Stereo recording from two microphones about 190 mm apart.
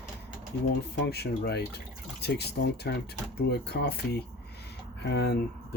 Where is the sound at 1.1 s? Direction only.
60° left (ahead or behind).